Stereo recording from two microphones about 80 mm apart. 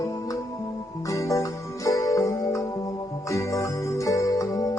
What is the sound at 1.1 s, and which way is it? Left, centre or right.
Music, left.